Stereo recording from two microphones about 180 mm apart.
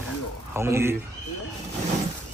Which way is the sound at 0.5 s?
15° right (ahead or behind).